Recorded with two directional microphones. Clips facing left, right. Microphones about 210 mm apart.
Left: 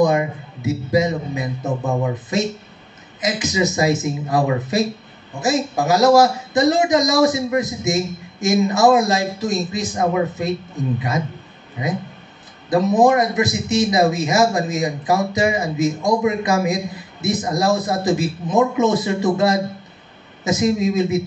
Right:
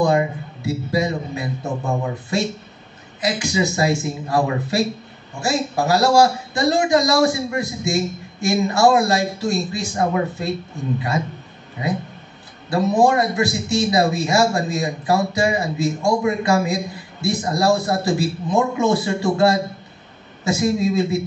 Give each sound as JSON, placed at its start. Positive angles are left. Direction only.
{"t": 0.0, "sound": "a man's voice", "side_deg": 20}